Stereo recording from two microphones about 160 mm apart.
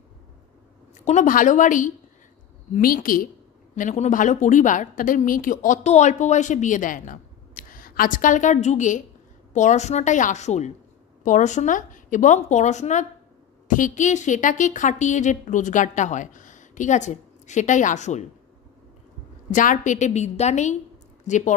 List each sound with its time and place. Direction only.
1.0 s a woman's voice: 50° left (ahead or behind)
3.7 s a woman's voice: 50° left (ahead or behind)
19.5 s a woman's voice: 55° left (ahead or behind)